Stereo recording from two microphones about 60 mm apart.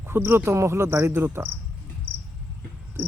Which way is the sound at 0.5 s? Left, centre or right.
Right.